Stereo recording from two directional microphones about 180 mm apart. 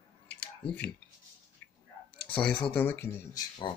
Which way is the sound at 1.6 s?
10° left (ahead or behind).